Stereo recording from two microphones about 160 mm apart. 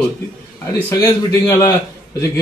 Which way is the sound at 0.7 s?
15° left (ahead or behind).